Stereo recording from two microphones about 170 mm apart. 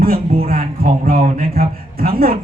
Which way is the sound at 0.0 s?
60° right (ahead or behind).